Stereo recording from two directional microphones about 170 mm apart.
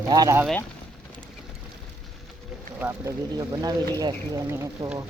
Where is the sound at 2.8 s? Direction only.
15° right (ahead or behind).